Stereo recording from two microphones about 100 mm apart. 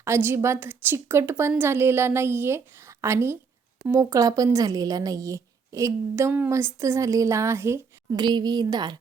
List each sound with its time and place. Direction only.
0.0 s a woman's voice: 25° right (ahead or behind)
8.1 s speech: 45° right (ahead or behind)